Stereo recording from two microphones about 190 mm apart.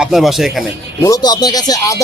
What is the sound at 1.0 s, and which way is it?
A man's voice, 20° left (ahead or behind).